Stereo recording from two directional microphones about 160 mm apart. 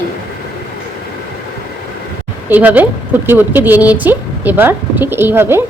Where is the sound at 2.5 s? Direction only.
10° right (ahead or behind).